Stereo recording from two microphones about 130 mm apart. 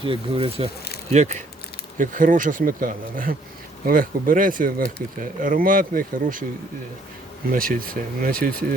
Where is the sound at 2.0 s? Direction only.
90° right.